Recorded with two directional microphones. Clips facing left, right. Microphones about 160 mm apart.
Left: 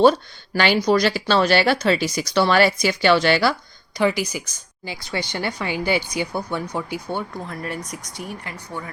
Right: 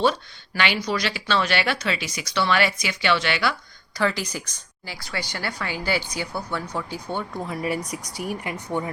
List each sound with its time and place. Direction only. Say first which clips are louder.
0.0 s speech: left 7 dB; 40° left (ahead or behind)
3.9 s speech: left 4 dB; 15° left (ahead or behind)
4.9 s speech: left 4 dB; 20° left (ahead or behind)
7.4 s a woman's voice: right 3 dB; 5° right (ahead or behind)